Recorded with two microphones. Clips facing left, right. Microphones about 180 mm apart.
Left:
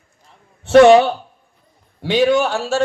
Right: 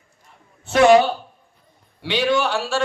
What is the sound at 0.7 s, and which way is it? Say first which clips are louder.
Speech: left 5 dB; 65° left (ahead or behind).